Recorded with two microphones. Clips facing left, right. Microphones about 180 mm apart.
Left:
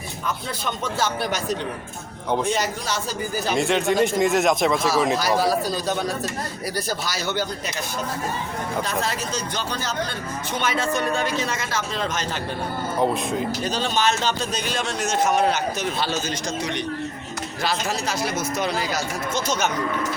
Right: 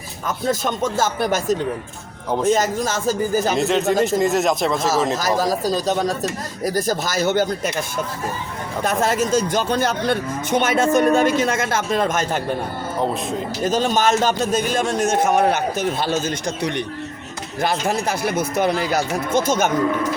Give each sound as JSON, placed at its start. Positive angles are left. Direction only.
{"t": 0.4, "sound": "speech", "side_deg": -45}
{"t": 3.6, "sound": "speech", "side_deg": -5}
{"t": 4.8, "sound": "speech", "side_deg": -45}
{"t": 8.8, "sound": "speech", "side_deg": -50}
{"t": 13.7, "sound": "speech", "side_deg": -45}